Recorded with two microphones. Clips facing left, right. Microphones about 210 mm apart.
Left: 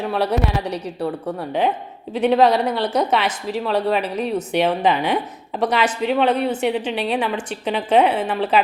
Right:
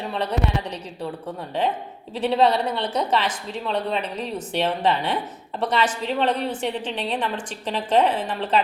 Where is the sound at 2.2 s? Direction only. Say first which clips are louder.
Left 4 dB; 65° left (ahead or behind).